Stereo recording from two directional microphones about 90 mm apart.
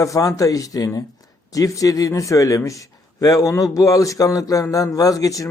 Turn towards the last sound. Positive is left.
turn(degrees=40)  # may be behind; listen again after turning